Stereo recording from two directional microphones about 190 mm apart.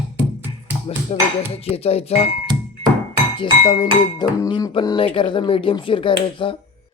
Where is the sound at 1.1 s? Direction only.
35° left (ahead or behind).